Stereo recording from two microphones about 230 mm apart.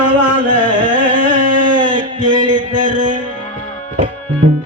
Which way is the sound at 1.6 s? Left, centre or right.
Centre.